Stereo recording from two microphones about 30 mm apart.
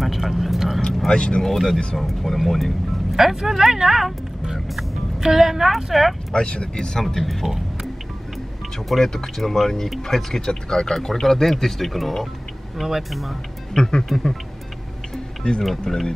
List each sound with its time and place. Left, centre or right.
0.0 s speech: centre
1.0 s speech: left
1.4 s speech: centre
1.7 s speech: left
2.3 s speech: centre
3.2 s speech: centre
6.3 s speech: left
6.9 s speech: centre
7.2 s speech: centre
8.8 s speech: centre
13.7 s speech: centre
15.4 s speech: left
15.9 s speech: centre